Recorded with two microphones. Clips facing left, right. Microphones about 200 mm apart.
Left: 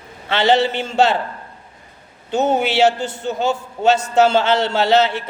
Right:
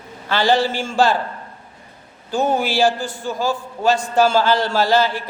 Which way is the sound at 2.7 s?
70° left (ahead or behind).